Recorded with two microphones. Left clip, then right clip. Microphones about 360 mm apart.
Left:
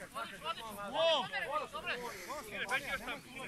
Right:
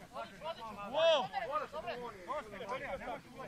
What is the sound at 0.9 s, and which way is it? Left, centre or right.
Speech, centre.